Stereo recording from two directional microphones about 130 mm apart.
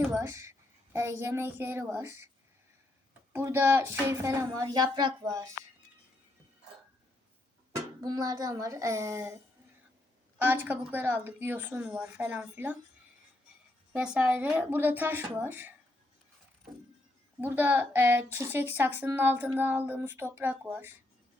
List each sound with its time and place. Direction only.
0.2 s a woman's voice: 20° right (ahead or behind)
3.3 s a woman's voice: 20° right (ahead or behind)
8.0 s a woman's voice: 30° right (ahead or behind)
13.9 s speech: 10° right (ahead or behind)
17.4 s speech: 15° right (ahead or behind)